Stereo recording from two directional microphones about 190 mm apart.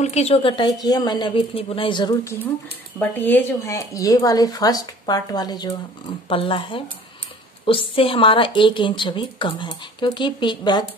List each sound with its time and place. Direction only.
0.0 s a woman's voice: 35° left (ahead or behind)
3.0 s a woman's voice: 10° left (ahead or behind)